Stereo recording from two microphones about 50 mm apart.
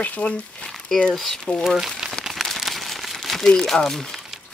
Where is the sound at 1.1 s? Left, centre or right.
Centre.